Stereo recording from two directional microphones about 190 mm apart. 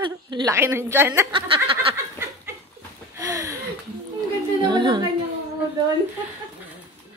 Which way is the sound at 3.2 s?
15° right (ahead or behind).